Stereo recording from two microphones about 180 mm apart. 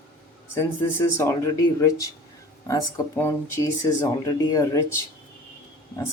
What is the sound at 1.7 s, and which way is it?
Speech, 20° left (ahead or behind).